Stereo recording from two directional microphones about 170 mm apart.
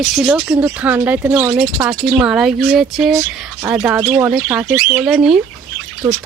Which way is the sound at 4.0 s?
20° right (ahead or behind).